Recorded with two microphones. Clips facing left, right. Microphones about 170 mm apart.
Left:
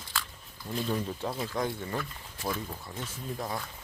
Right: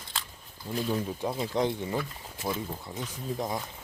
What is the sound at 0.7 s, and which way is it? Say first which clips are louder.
Speech: right 2 dB; 5° right (ahead or behind).